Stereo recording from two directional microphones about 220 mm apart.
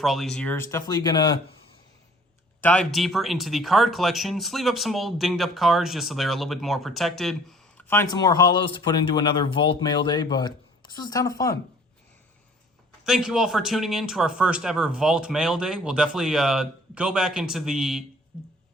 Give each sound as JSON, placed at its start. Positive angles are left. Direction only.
{"t": 0.0, "sound": "speech", "side_deg": 0}
{"t": 0.7, "sound": "speech", "side_deg": 15}
{"t": 2.6, "sound": "speech", "side_deg": 5}
{"t": 8.1, "sound": "speech", "side_deg": 20}
{"t": 13.1, "sound": "speech", "side_deg": -5}